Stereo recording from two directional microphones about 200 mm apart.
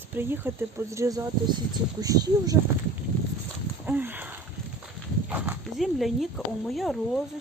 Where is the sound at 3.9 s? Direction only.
10° right (ahead or behind).